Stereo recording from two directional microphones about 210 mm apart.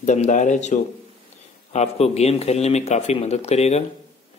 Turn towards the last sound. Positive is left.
turn(degrees=30)  # may be behind; listen again after turning